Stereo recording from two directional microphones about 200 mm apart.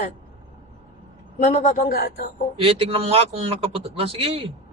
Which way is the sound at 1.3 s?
35° left (ahead or behind).